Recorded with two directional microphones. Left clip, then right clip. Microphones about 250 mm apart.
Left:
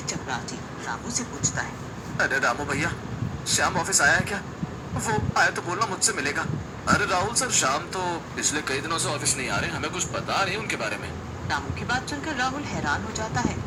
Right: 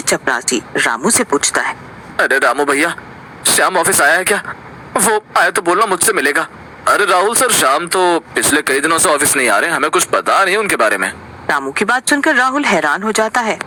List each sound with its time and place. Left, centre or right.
0.1 s speech: right
2.1 s speech: right